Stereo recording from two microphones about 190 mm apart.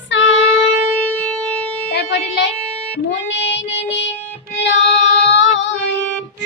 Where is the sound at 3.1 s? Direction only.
70° left (ahead or behind).